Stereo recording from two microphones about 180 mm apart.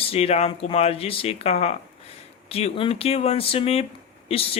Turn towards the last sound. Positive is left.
turn(degrees=35)  # may be behind; listen again after turning